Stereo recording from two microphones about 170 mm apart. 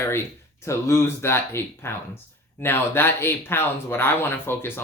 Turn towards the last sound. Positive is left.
turn(degrees=15)  # may be behind; listen again after turning